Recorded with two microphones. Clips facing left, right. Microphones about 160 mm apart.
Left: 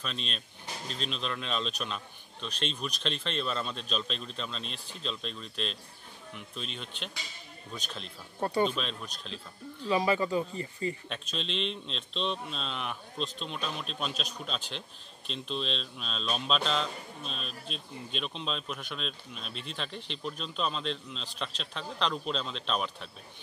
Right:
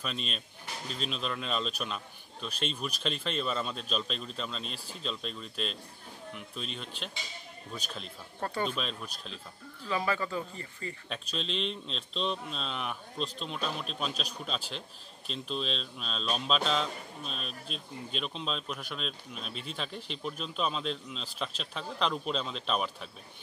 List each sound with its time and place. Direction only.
0.0 s speech: 5° right (ahead or behind)
8.4 s speech: 15° left (ahead or behind)
8.6 s speech: 5° right (ahead or behind)
9.8 s speech: 15° left (ahead or behind)
11.1 s speech: centre (ahead or behind)